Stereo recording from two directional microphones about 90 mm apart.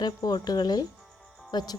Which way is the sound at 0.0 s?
45° left (ahead or behind).